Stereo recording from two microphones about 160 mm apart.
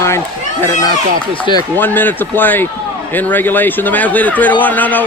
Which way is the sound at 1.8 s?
10° left (ahead or behind).